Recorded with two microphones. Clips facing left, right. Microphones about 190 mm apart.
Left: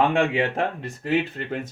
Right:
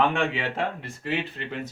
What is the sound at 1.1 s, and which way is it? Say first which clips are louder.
Speech: left 6 dB; 45° left (ahead or behind).